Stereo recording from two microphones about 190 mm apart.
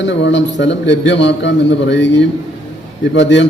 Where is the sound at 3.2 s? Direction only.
70° left (ahead or behind).